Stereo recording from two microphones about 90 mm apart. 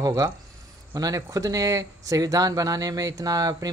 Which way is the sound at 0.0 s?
45° right (ahead or behind).